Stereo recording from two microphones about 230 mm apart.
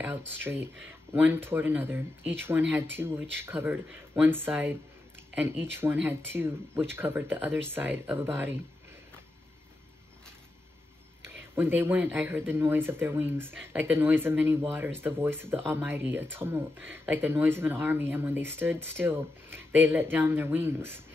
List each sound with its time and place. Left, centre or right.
0.4 s speech: centre
11.2 s speech: centre